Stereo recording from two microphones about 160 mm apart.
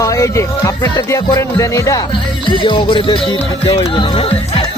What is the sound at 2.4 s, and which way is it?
Music, 30° left (ahead or behind).